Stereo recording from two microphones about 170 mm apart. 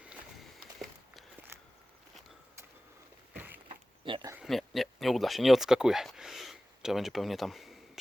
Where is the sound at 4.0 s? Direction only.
30° right (ahead or behind).